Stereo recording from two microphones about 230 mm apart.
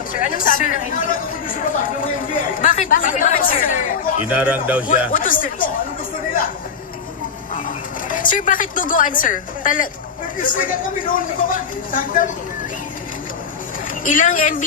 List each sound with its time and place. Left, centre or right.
0.1 s speech: left
4.3 s a man's voice: centre
5.1 s speech: left
8.1 s speech: left
14.0 s speech: left